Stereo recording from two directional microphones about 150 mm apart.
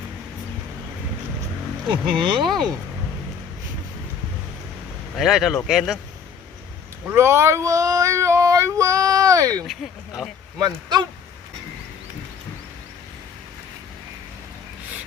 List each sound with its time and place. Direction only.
1.9 s speech: 35° right (ahead or behind)
5.1 s speech: centre (ahead or behind)
7.0 s female singing: 15° right (ahead or behind)
10.6 s speech: 30° right (ahead or behind)